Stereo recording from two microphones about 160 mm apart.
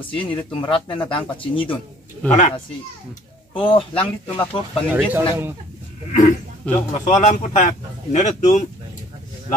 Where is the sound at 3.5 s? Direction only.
30° left (ahead or behind).